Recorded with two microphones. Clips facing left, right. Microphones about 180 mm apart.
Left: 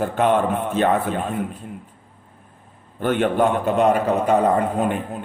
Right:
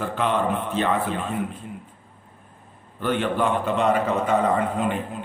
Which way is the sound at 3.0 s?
50° left (ahead or behind).